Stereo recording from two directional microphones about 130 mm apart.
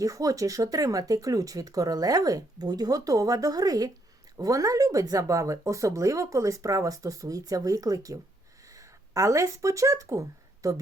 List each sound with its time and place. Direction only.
0.0 s speech: 25° right (ahead or behind)